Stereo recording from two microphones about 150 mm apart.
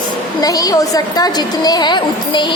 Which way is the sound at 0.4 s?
25° left (ahead or behind).